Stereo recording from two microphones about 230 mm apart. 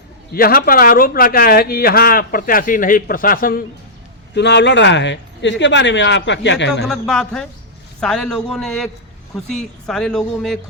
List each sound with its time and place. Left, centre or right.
0.3 s a man's voice: left
4.4 s speech: left
6.8 s speech: centre